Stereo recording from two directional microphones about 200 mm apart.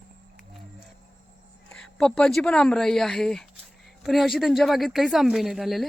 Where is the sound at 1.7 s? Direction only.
5° left (ahead or behind).